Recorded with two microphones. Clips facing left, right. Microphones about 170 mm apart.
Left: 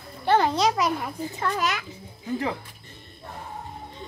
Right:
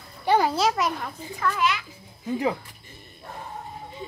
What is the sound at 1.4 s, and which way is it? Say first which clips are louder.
Speech: right 2 dB; 40° left (ahead or behind).